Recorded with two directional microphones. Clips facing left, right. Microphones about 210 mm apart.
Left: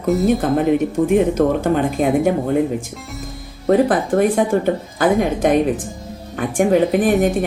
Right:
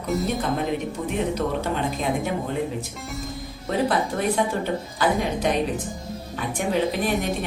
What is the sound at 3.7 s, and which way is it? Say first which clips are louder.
Speech: left 9 dB; 50° left (ahead or behind).